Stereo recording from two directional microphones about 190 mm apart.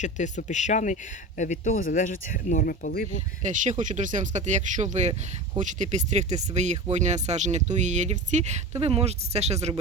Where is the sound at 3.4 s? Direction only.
40° right (ahead or behind).